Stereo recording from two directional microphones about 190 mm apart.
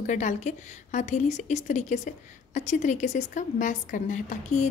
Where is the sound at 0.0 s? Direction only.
40° left (ahead or behind).